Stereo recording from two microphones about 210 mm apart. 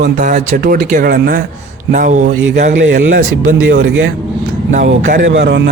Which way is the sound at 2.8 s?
60° right (ahead or behind).